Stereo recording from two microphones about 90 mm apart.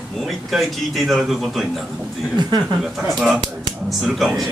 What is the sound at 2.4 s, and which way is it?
Speech, 55° right (ahead or behind).